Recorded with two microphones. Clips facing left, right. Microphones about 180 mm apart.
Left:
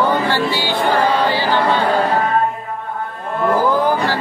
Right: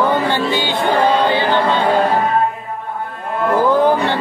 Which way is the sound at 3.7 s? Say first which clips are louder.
Right 3 dB; 25° right (ahead or behind).